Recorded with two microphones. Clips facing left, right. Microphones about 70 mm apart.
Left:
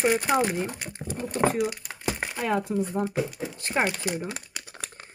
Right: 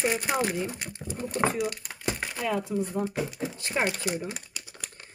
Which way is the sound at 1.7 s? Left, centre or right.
Centre.